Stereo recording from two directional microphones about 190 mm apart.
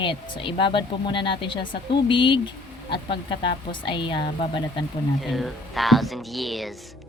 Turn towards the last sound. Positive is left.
turn(degrees=0)  # may be behind; listen again after turning